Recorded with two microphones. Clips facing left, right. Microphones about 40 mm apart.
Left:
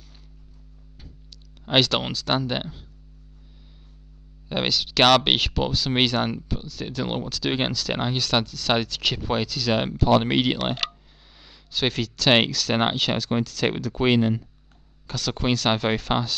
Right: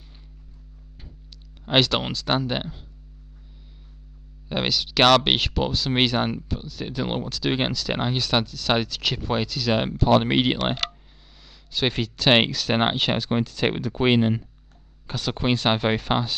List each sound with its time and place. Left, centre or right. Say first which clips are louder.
1.6 s speech: even; centre
4.5 s speech: even; centre
11.3 s a sound: even; centre
11.9 s speech: right 1 dB; centre